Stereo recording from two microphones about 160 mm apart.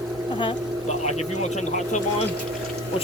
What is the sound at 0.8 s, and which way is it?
Speech, 45° left (ahead or behind).